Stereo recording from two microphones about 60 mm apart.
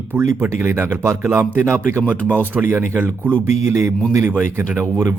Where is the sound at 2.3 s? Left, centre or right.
Right.